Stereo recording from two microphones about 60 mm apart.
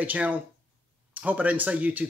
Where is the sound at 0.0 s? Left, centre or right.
Right.